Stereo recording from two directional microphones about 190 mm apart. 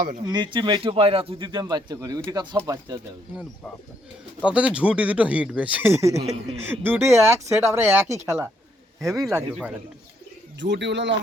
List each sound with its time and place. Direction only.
0.3 s a man's voice: 25° right (ahead or behind)
4.4 s speech: 5° right (ahead or behind)
6.1 s speech: 35° right (ahead or behind)
6.6 s speech: 10° right (ahead or behind)
9.2 s speech: 5° right (ahead or behind)
10.6 s speech: 65° right (ahead or behind)